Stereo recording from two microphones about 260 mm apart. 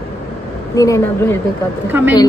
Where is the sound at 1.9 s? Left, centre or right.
Centre.